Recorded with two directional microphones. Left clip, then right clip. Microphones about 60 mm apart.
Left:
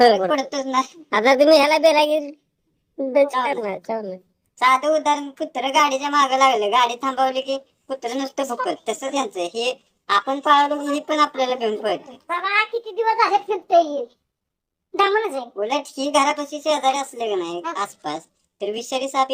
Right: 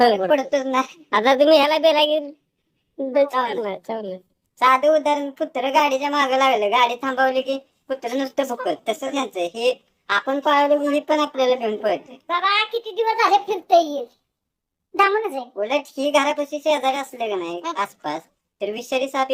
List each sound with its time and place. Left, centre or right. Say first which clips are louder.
0.0 s a woman's voice: left 2 dB; centre
0.3 s a woman's voice: right 3 dB; right
1.1 s a woman's voice: left 1 dB; centre
4.5 s a woman's voice: right 1 dB; right
5.4 s a woman's voice: right 1 dB; centre
14.9 s a woman's voice: even; centre
15.6 s a woman's voice: right 2 dB; right